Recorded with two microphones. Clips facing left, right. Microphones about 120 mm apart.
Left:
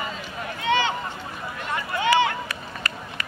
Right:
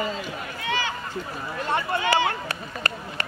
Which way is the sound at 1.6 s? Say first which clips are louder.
Left 1 dB; 30° right (ahead or behind).